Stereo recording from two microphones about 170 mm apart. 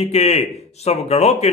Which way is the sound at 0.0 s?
40° left (ahead or behind).